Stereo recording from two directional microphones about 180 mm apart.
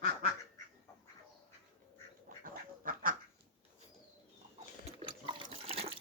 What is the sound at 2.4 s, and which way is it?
Duck, 50° right (ahead or behind).